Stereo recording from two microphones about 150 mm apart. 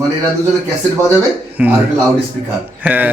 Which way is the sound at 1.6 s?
10° right (ahead or behind).